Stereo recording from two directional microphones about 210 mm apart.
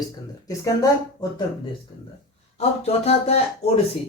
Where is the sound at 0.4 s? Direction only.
15° left (ahead or behind).